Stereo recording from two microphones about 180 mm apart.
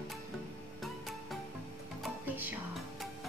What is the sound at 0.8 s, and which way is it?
Music, centre (ahead or behind).